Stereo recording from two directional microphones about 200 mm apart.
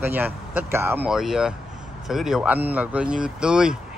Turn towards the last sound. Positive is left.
turn(degrees=-5)  # may be behind; listen again after turning